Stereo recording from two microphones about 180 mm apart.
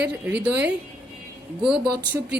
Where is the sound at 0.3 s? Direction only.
10° right (ahead or behind).